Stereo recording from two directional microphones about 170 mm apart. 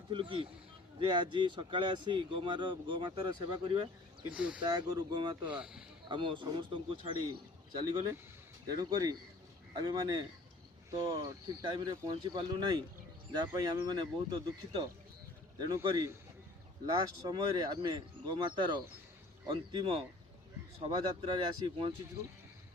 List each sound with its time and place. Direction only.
0.1 s speech: 30° right (ahead or behind)
4.4 s speech: 5° right (ahead or behind)
4.6 s speech: 25° right (ahead or behind)
5.5 s speech: 5° right (ahead or behind)
6.1 s speech: 30° right (ahead or behind)